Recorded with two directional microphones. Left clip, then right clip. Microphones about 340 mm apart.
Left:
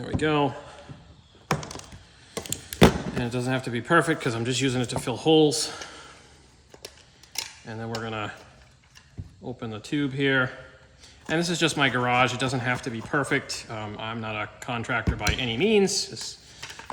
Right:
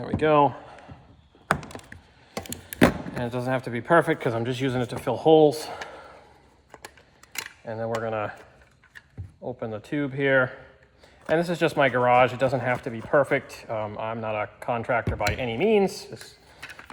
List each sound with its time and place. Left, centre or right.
0.0 s a sound: centre
3.2 s speech: centre
7.6 s speech: centre
9.4 s speech: centre